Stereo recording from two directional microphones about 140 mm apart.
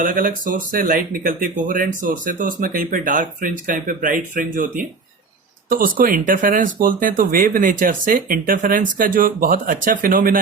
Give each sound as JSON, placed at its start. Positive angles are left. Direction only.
{"t": 0.0, "sound": "speech", "side_deg": -80}
{"t": 1.6, "sound": "speech", "side_deg": -80}
{"t": 5.6, "sound": "speech", "side_deg": -85}